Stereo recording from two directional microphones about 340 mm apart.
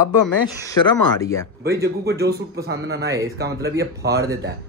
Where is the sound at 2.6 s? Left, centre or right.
Right.